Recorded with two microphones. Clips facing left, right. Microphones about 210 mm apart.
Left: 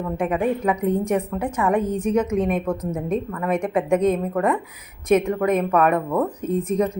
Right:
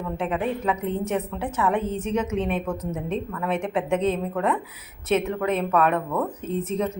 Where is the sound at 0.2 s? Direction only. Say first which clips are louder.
Left 5 dB; 10° left (ahead or behind).